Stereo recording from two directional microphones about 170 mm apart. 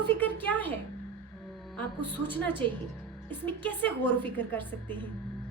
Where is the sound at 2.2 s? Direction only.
10° left (ahead or behind).